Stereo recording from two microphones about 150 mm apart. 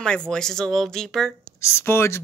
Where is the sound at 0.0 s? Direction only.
5° left (ahead or behind).